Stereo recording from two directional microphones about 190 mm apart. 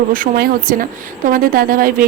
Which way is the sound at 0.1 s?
50° right (ahead or behind).